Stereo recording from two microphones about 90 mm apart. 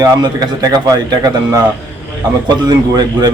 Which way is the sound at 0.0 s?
45° right (ahead or behind).